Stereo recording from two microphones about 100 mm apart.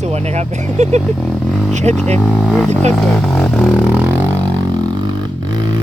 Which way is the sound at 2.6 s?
15° left (ahead or behind).